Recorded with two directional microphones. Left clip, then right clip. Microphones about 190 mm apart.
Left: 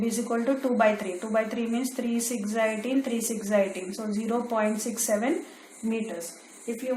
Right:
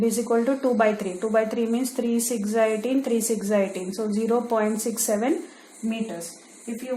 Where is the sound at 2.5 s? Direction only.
50° right (ahead or behind).